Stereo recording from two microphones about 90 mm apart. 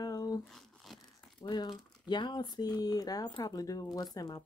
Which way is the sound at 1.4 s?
55° left (ahead or behind).